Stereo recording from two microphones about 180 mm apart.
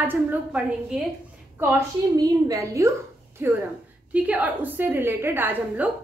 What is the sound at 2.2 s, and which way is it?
A woman's voice, 20° right (ahead or behind).